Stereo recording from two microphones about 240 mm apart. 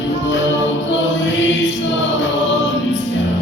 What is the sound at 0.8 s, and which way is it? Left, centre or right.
Chant, left.